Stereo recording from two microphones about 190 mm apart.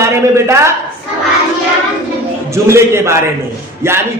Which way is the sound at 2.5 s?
15° right (ahead or behind).